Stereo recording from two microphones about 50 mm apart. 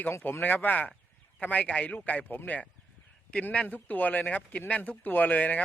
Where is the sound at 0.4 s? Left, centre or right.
Left.